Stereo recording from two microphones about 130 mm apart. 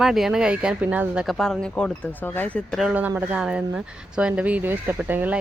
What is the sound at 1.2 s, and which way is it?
Speech, centre (ahead or behind).